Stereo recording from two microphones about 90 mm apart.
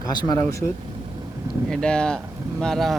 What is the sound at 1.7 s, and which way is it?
Speech, 10° left (ahead or behind).